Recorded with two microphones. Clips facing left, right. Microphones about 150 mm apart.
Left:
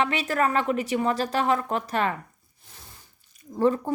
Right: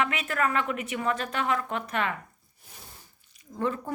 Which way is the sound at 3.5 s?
30° left (ahead or behind).